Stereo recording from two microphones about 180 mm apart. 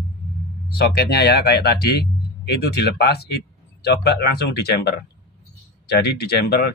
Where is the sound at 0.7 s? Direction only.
60° left (ahead or behind).